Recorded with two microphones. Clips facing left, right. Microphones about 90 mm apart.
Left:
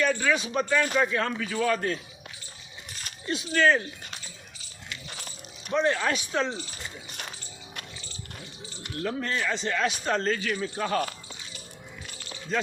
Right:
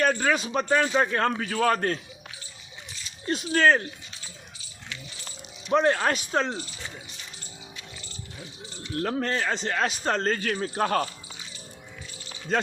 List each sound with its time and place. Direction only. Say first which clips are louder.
0.0 s speech: right 1 dB; 45° right (ahead or behind)
3.2 s speech: right 2 dB; 40° right (ahead or behind)
5.7 s speech: right 3 dB; 45° right (ahead or behind)
6.7 s a sound: even; 60° left (ahead or behind)
9.0 s speech: right 3 dB; 45° right (ahead or behind)